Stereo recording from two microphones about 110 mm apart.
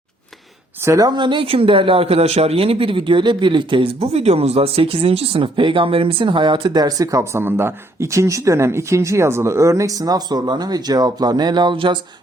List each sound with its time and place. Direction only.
0.9 s speech: 35° right (ahead or behind)